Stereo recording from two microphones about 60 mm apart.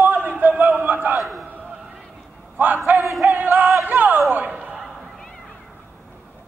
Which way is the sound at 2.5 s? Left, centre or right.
Right.